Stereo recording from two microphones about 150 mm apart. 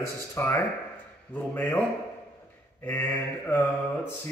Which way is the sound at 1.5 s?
15° left (ahead or behind).